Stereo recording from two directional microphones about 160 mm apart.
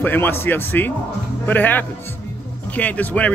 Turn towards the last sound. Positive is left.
turn(degrees=10)  # may be behind; listen again after turning